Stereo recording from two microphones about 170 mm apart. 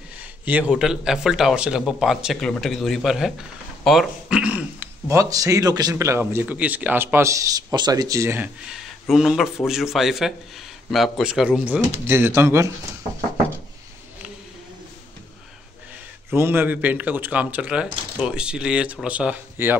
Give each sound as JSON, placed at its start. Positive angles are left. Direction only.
{"t": 0.2, "sound": "speech", "side_deg": -10}
{"t": 3.8, "sound": "a sound", "side_deg": 0}
{"t": 5.1, "sound": "a man's voice", "side_deg": -20}
{"t": 8.6, "sound": "a man's voice", "side_deg": 0}
{"t": 16.3, "sound": "a man's voice", "side_deg": -15}